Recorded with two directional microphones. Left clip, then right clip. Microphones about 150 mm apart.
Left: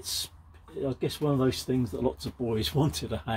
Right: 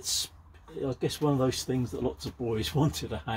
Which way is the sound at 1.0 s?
30° left (ahead or behind).